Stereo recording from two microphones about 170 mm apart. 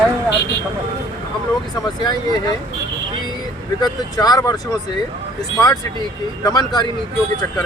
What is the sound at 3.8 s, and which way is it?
Speech, 25° left (ahead or behind).